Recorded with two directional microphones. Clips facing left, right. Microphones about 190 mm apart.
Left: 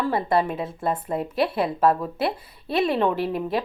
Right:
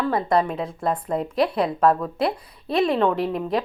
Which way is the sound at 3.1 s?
5° left (ahead or behind).